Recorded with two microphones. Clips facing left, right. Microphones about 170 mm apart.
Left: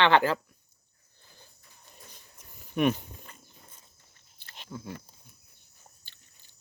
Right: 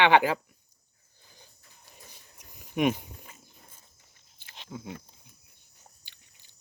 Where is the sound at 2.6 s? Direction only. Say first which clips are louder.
Even; 15° right (ahead or behind).